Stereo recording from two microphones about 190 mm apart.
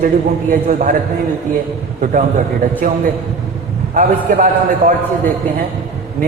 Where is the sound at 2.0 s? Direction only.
40° right (ahead or behind).